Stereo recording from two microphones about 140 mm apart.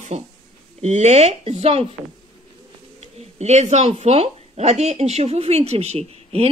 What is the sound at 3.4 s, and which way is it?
A woman's voice, 55° right (ahead or behind).